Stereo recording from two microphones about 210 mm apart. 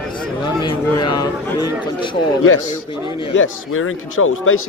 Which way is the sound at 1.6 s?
10° right (ahead or behind).